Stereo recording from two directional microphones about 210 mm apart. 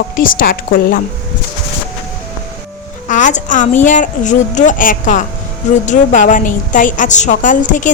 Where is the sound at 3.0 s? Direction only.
35° left (ahead or behind).